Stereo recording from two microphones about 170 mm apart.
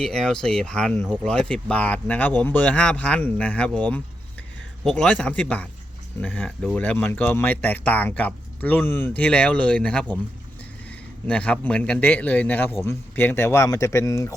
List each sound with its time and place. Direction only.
0.0 s a man's voice: 5° left (ahead or behind)